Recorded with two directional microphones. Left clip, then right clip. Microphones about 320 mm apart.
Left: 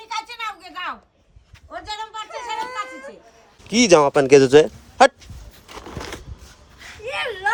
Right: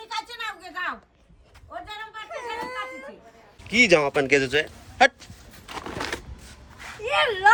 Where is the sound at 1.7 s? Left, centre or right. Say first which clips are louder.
Left 6 dB; centre.